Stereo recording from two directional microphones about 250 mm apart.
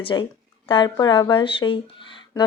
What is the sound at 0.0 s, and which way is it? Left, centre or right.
Speech, centre.